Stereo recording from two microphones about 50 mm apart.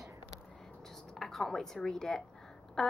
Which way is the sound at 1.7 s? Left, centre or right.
Centre.